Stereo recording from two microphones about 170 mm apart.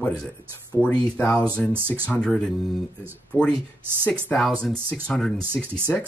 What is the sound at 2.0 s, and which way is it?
Speech, 5° left (ahead or behind).